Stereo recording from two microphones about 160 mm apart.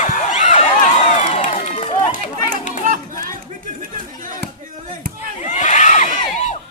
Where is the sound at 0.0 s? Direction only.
50° left (ahead or behind).